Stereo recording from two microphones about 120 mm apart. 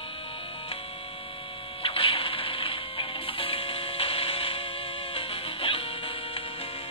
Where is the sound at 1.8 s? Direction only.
50° left (ahead or behind).